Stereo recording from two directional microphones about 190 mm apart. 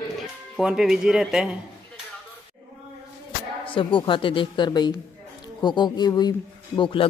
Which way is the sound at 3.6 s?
25° left (ahead or behind).